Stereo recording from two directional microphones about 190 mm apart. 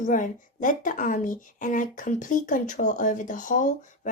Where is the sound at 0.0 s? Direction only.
45° left (ahead or behind).